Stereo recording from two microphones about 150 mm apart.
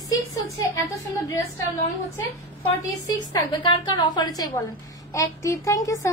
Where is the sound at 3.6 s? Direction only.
30° left (ahead or behind).